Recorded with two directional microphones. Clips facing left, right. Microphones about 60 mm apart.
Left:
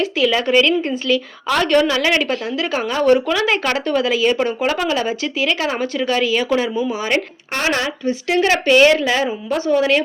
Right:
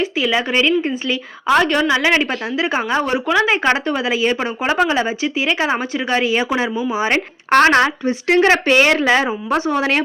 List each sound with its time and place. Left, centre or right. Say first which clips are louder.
0.0 s a woman's voice: left 1 dB; centre
7.5 s speech: right 8 dB; right